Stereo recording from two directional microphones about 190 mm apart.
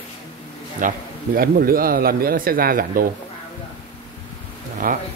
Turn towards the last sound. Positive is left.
turn(degrees=-50)  # may be behind; listen again after turning